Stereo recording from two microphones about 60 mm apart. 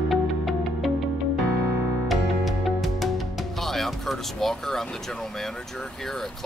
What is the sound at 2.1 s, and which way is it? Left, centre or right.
Music, centre.